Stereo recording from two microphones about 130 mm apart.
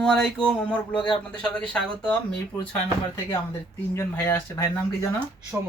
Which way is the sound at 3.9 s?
20° left (ahead or behind).